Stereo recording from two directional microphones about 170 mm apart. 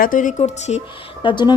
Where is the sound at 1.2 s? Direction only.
25° left (ahead or behind).